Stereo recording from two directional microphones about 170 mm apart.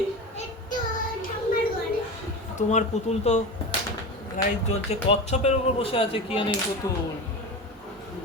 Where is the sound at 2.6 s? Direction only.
45° left (ahead or behind).